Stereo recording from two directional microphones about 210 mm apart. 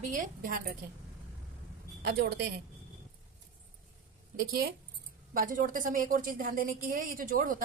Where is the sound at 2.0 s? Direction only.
50° right (ahead or behind).